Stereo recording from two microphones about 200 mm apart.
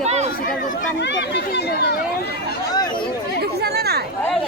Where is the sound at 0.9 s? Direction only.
60° left (ahead or behind).